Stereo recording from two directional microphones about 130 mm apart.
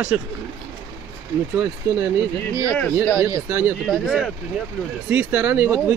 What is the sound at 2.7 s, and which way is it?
Speech, 10° left (ahead or behind).